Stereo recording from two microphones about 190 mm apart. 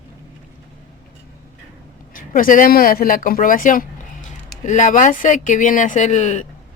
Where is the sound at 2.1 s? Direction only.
45° left (ahead or behind).